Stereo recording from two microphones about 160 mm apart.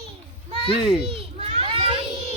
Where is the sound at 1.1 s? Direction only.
35° right (ahead or behind).